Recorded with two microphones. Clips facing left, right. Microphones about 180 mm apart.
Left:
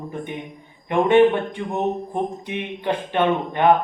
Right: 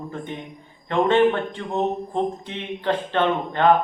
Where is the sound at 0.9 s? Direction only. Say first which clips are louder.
Left 3 dB; 15° left (ahead or behind).